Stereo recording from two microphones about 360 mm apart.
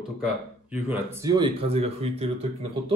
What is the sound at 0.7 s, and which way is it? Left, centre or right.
Speech, centre.